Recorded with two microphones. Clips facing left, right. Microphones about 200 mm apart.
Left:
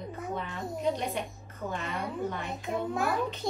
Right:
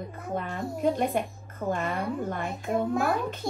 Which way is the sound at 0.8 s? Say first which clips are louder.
Right 6 dB; 50° right (ahead or behind).